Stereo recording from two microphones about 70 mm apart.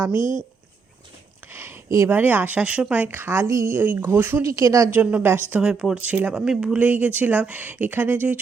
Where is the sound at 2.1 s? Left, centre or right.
Right.